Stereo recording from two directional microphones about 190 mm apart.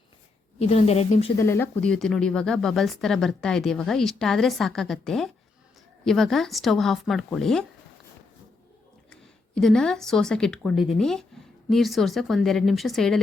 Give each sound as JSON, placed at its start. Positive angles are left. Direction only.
{"t": 0.6, "sound": "a woman's voice", "side_deg": 35}
{"t": 1.4, "sound": "speech", "side_deg": 10}
{"t": 9.6, "sound": "speech", "side_deg": 0}